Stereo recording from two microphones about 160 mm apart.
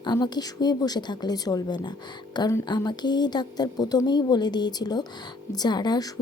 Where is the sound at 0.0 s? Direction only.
25° left (ahead or behind).